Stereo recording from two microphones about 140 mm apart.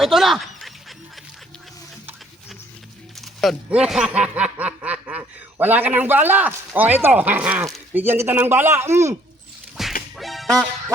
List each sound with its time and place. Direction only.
0.0 s snicker: centre (ahead or behind)
3.7 s snicker: 5° right (ahead or behind)
9.8 s music: centre (ahead or behind)
10.2 s quack: centre (ahead or behind)